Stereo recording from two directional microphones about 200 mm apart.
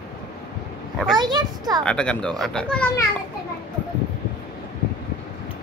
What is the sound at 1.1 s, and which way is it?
Speech, 20° right (ahead or behind).